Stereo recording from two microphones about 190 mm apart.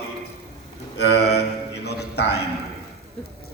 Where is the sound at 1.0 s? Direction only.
60° left (ahead or behind).